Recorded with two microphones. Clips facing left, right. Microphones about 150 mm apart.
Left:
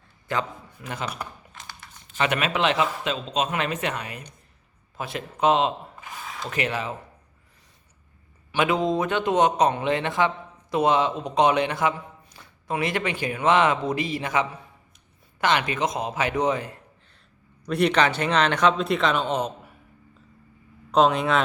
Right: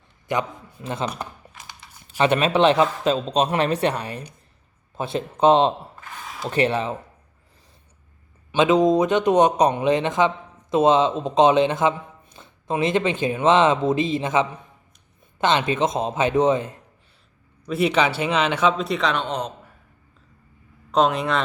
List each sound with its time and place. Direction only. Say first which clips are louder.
0.3 s a man's voice: right 3 dB; 20° right (ahead or behind)
1.5 s a sound: even; 15° right (ahead or behind)
2.1 s a man's voice: right 6 dB; 30° right (ahead or behind)
6.0 s a sound: even; 10° left (ahead or behind)
6.2 s a sound: right 4 dB; centre (ahead or behind)
6.5 s a man's voice: right 7 dB; 30° right (ahead or behind)
8.5 s a man's voice: right 6 dB; 20° right (ahead or behind)
17.7 s a man's voice: right 1 dB; 5° right (ahead or behind)
20.9 s a man's voice: even; centre (ahead or behind)